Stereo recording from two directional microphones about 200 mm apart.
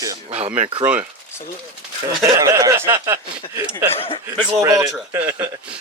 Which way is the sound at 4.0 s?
25° left (ahead or behind).